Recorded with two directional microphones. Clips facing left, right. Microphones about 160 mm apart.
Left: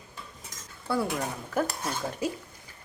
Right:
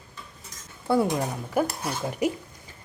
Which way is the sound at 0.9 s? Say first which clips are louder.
Right 6 dB; 20° right (ahead or behind).